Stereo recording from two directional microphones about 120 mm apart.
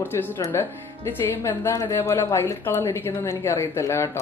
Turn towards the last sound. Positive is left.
turn(degrees=20)  # may be behind; listen again after turning